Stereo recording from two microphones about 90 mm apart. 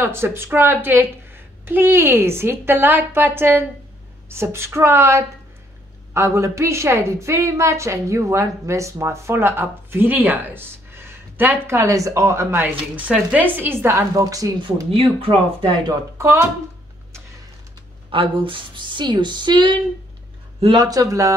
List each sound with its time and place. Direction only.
0.0 s a woman's voice: 25° right (ahead or behind)
12.6 s a woman's voice: 15° right (ahead or behind); by 14.5 s 40° right (ahead or behind)
14.9 s speech: 90° right
15.9 s a woman's voice: 35° right (ahead or behind)
18.1 s speech: 75° right (ahead or behind); by 19.8 s 60° right (ahead or behind)
20.7 s a woman's voice: 40° right (ahead or behind)